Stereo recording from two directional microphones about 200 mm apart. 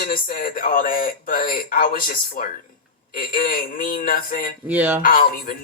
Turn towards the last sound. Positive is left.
turn(degrees=45)  # may be behind; listen again after turning